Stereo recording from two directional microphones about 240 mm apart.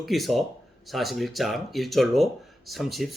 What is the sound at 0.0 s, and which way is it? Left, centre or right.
Speech, centre.